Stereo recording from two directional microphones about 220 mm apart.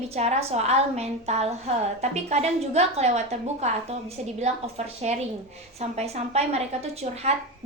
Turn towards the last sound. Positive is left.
turn(degrees=-30)  # may be behind; listen again after turning